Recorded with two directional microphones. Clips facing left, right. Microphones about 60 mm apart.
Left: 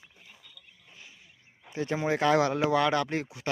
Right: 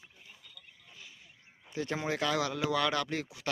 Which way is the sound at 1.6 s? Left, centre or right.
Left.